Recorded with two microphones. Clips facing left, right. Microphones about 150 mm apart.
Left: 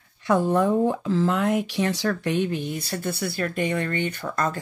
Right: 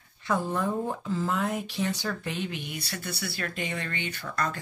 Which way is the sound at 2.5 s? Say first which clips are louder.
Left 8 dB; 45° left (ahead or behind).